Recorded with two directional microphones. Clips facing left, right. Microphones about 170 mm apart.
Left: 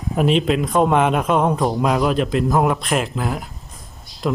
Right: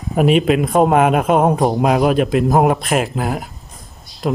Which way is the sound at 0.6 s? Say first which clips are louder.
Right 3 dB; 50° right (ahead or behind).